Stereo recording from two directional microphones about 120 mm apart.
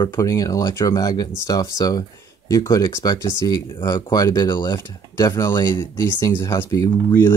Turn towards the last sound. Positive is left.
turn(degrees=20)  # may be behind; listen again after turning